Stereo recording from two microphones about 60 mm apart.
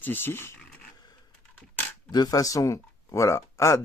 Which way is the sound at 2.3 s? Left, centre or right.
Left.